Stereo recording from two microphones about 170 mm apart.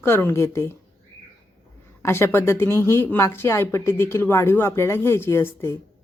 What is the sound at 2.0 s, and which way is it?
Speech, 15° left (ahead or behind).